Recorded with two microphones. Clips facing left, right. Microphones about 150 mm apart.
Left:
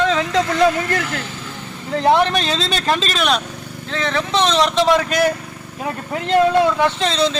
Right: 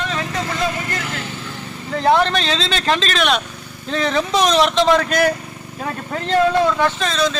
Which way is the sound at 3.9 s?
15° right (ahead or behind).